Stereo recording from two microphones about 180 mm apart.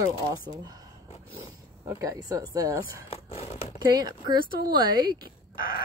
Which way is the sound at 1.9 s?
15° right (ahead or behind).